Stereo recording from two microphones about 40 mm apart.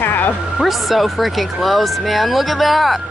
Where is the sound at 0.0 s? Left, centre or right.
Left.